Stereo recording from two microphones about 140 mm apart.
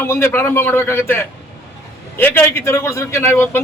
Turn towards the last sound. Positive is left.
turn(degrees=15)  # may be behind; listen again after turning